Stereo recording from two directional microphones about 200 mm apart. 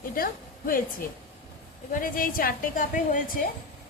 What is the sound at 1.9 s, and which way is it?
A woman's voice, 45° left (ahead or behind).